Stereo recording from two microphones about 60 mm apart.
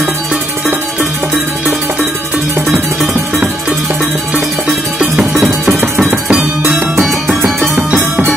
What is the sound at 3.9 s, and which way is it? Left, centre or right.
Music, centre.